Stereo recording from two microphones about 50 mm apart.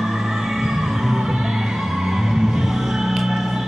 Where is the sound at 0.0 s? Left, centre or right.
Centre.